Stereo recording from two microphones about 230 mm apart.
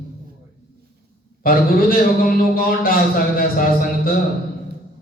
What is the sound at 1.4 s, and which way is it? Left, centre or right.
A man's voice, left.